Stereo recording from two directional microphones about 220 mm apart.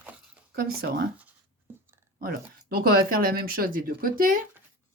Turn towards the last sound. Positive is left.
turn(degrees=-40)  # may be behind; listen again after turning